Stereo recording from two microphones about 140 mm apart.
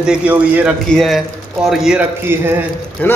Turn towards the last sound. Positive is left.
turn(degrees=10)  # may be behind; listen again after turning